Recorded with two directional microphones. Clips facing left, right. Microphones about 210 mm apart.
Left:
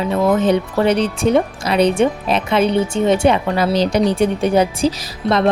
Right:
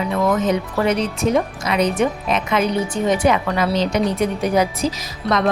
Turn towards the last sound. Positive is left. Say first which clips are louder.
# left 3 dB
turn(degrees=30)  # may be behind; listen again after turning